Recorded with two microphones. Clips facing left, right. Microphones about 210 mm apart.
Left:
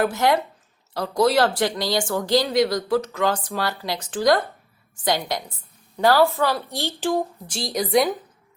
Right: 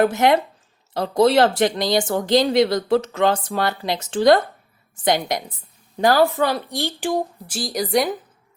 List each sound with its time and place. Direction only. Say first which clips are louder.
0.0 s a woman's voice: right 4 dB; 20° right (ahead or behind); by 8.1 s centre (ahead or behind)